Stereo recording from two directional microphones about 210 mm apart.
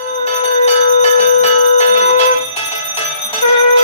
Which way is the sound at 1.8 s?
30° left (ahead or behind).